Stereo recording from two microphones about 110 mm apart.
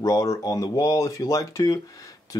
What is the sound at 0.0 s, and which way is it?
Speech, 30° left (ahead or behind).